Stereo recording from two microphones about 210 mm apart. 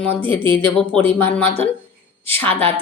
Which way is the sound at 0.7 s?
5° left (ahead or behind).